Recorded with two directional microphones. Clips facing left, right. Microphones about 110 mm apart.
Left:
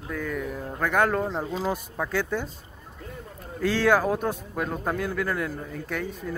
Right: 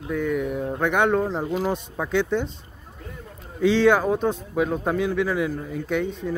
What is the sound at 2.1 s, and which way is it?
Speech, 5° left (ahead or behind).